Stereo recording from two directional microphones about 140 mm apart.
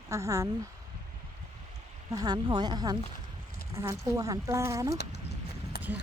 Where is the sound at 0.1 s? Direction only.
20° right (ahead or behind).